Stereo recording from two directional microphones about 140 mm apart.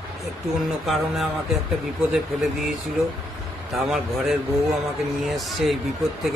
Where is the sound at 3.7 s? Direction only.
Centre (ahead or behind).